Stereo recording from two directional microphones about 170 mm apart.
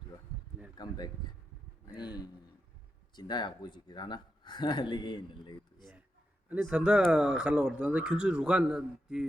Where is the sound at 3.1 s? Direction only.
25° left (ahead or behind).